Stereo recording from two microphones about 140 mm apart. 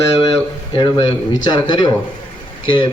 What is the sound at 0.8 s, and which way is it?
A man's voice, 30° left (ahead or behind).